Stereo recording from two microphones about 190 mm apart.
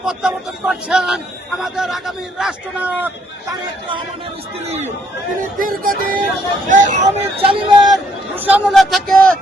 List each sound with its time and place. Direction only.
0.0 s a man's voice: 5° right (ahead or behind)
3.5 s speech: 25° right (ahead or behind)
5.4 s speech: 45° right (ahead or behind)
7.9 s a man's voice: 5° right (ahead or behind)